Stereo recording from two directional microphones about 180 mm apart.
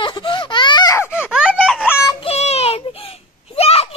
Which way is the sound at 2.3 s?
35° left (ahead or behind).